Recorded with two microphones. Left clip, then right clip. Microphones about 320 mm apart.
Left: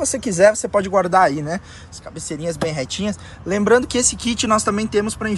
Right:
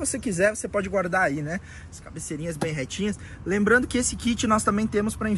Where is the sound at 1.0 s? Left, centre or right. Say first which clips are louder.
Left 9 dB; left.